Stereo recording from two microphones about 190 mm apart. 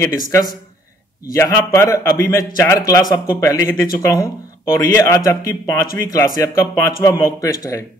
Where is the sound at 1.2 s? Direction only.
15° left (ahead or behind).